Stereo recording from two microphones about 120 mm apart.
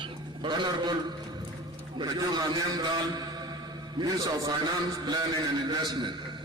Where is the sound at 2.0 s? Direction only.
35° right (ahead or behind).